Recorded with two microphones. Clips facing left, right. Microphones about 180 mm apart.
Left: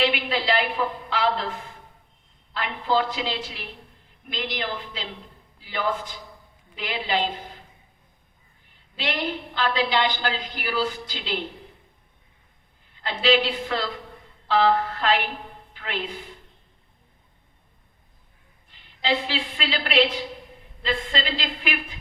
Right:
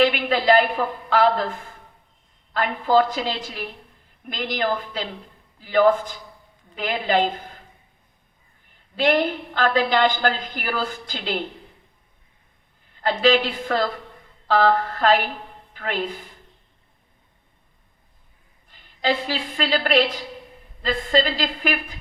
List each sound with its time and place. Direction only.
0.0 s a woman's voice: 45° right (ahead or behind)
9.0 s a woman's voice: 50° right (ahead or behind)
13.0 s a woman's voice: 45° right (ahead or behind)
18.7 s a woman's voice: 45° right (ahead or behind)